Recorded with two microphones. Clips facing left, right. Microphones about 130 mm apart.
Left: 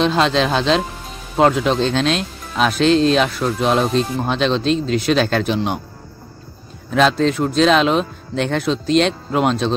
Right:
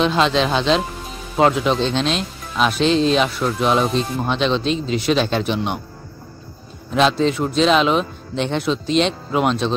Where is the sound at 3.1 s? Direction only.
45° left (ahead or behind).